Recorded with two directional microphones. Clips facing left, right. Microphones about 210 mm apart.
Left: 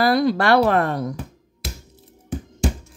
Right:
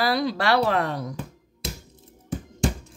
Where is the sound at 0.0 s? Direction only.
50° left (ahead or behind).